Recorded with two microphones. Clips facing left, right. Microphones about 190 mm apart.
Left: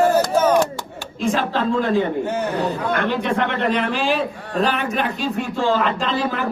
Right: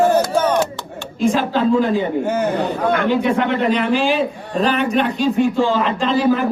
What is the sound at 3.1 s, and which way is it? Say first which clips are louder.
Speech: right 4 dB; 5° right (ahead or behind).